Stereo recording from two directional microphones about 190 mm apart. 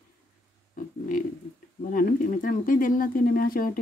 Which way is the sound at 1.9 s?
45° left (ahead or behind).